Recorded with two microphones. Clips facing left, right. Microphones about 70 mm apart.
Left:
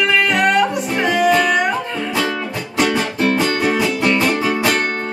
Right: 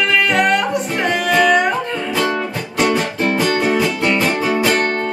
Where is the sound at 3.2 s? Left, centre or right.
Centre.